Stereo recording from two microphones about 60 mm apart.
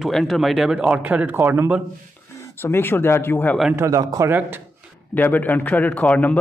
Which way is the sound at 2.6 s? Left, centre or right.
Left.